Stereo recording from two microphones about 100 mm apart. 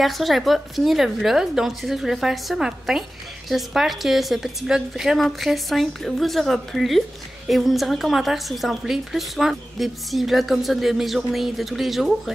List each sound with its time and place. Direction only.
0.0 s a woman's voice: centre (ahead or behind)